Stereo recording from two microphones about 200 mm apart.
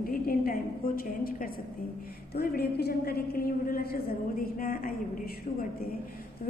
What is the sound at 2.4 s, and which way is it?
A woman's voice, 50° left (ahead or behind).